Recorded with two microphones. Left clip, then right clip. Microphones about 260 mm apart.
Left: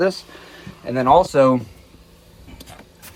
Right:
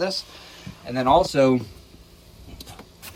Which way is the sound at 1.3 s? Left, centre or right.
Centre.